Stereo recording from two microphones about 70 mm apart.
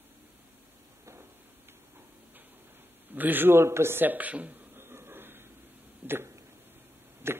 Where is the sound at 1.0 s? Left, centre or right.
Right.